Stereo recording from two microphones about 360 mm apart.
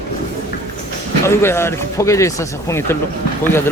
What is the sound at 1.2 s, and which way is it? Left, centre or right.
Speech, centre.